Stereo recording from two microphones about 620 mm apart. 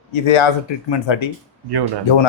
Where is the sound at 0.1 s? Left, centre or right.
Left.